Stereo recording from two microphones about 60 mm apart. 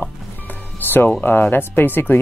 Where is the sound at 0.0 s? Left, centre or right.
Left.